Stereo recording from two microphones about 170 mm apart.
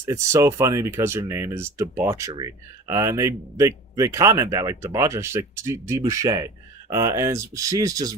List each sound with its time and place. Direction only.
0.0 s speech: 15° right (ahead or behind)